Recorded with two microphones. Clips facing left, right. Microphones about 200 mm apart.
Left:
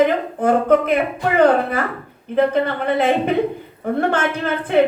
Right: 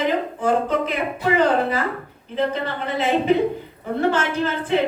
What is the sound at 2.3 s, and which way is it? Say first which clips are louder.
A woman's voice: left 6 dB; 55° left (ahead or behind).